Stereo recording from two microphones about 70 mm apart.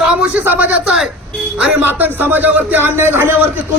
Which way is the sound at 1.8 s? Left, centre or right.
Right.